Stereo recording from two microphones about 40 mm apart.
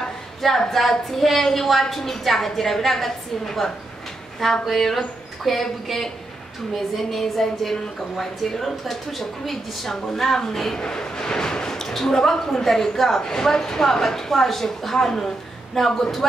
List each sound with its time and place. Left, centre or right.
0.6 s a woman's voice: centre